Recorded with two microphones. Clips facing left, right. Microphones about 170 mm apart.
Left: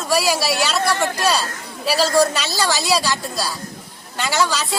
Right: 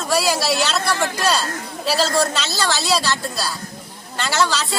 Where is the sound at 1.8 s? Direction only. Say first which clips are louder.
Left 3 dB; 10° left (ahead or behind).